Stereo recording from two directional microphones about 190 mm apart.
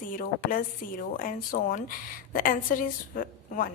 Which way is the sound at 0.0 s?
45° left (ahead or behind).